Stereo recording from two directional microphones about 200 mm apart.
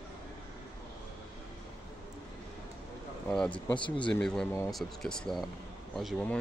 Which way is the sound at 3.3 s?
5° left (ahead or behind).